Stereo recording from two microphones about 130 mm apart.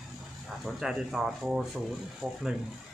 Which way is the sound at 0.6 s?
Centre (ahead or behind).